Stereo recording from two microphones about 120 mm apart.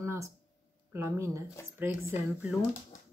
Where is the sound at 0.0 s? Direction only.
25° right (ahead or behind).